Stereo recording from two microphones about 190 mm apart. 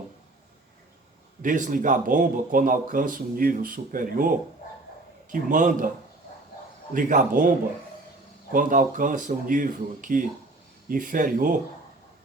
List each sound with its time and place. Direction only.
1.4 s a man's voice: 45° right (ahead or behind)
6.9 s a man's voice: 40° right (ahead or behind)
8.5 s a man's voice: 45° right (ahead or behind)